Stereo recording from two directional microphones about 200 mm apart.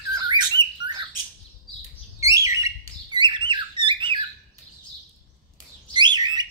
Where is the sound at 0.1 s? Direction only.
20° right (ahead or behind).